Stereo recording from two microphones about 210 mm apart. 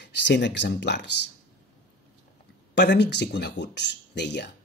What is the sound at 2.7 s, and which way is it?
Speech, 55° left (ahead or behind).